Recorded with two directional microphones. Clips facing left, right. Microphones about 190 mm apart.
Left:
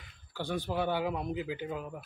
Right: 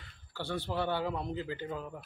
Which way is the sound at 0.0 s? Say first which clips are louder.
Left 2 dB; 15° left (ahead or behind).